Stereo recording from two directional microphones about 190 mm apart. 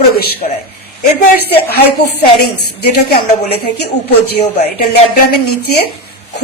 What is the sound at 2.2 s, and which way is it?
Speech, 55° left (ahead or behind).